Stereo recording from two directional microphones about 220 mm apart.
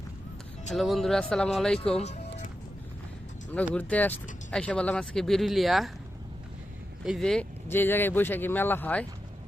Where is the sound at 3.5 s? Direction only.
5° left (ahead or behind).